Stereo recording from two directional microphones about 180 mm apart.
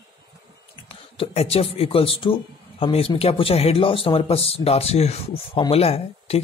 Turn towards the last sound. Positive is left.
turn(degrees=35)  # may be behind; listen again after turning